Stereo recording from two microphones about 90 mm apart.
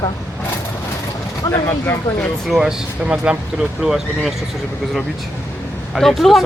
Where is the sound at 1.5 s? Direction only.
30° left (ahead or behind).